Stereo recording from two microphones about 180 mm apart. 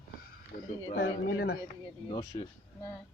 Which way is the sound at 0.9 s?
60° left (ahead or behind).